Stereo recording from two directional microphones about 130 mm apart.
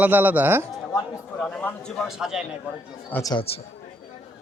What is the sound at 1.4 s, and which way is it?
Speech, 10° left (ahead or behind).